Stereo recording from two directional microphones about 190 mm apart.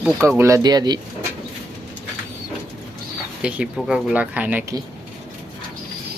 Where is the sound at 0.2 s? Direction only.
15° right (ahead or behind).